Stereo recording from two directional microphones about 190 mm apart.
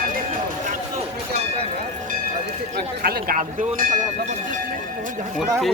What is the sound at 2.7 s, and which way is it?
Speech, 55° right (ahead or behind).